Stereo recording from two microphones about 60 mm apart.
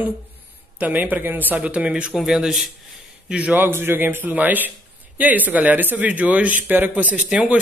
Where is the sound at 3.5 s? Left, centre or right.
Right.